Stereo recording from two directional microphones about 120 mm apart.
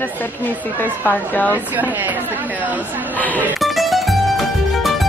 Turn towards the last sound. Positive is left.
turn(degrees=0)  # may be behind; listen again after turning